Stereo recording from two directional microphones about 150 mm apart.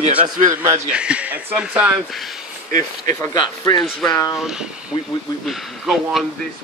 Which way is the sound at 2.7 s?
60° right (ahead or behind).